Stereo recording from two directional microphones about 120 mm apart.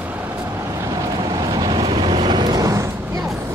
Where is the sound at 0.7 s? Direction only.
30° right (ahead or behind).